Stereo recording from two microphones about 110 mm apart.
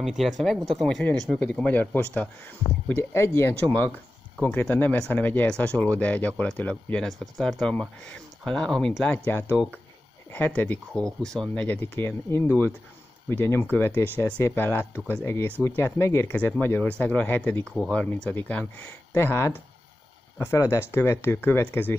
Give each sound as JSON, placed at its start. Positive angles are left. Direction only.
{"t": 0.0, "sound": "speech", "side_deg": 0}
{"t": 2.9, "sound": "speech", "side_deg": 25}
{"t": 7.1, "sound": "speech", "side_deg": 0}